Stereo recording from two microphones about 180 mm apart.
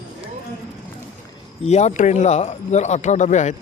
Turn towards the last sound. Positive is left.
turn(degrees=40)  # may be behind; listen again after turning